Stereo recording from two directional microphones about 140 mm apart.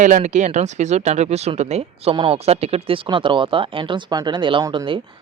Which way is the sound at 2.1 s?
40° right (ahead or behind).